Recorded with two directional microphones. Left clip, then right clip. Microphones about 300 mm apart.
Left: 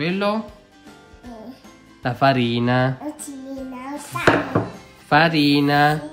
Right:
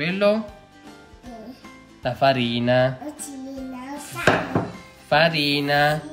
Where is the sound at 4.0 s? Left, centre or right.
Left.